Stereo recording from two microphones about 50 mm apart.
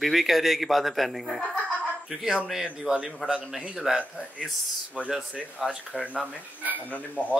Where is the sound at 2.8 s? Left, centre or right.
Centre.